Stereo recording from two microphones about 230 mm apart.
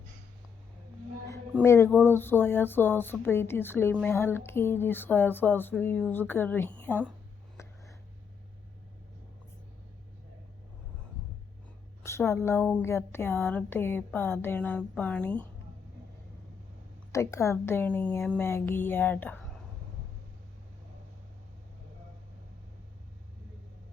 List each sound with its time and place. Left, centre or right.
1.6 s speech: centre
7.5 s a sound: centre
12.0 s speech: centre
17.1 s speech: centre